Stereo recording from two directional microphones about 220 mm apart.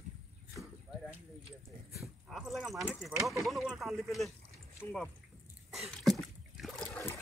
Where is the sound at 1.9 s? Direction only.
Centre (ahead or behind).